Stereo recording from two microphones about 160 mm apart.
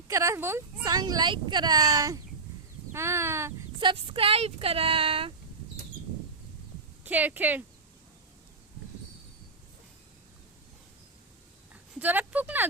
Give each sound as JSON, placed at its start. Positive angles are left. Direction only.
{"t": 0.1, "sound": "speech", "side_deg": -20}
{"t": 3.8, "sound": "speech", "side_deg": -30}
{"t": 7.0, "sound": "speech", "side_deg": -10}
{"t": 11.7, "sound": "a sound", "side_deg": -10}